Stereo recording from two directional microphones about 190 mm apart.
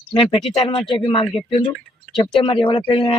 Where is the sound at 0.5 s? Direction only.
30° left (ahead or behind).